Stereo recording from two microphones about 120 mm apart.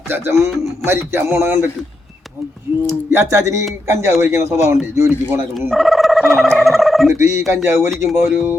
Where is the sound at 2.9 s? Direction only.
20° right (ahead or behind).